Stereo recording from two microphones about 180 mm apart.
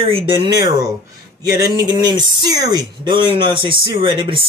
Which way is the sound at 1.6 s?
20° right (ahead or behind).